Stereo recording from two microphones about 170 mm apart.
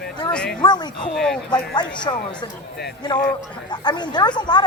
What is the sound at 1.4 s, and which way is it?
Speech, 25° left (ahead or behind).